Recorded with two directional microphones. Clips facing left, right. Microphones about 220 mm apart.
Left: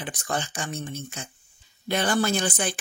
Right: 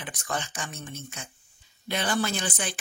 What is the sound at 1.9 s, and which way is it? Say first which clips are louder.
Speech: left 4 dB; 45° left (ahead or behind).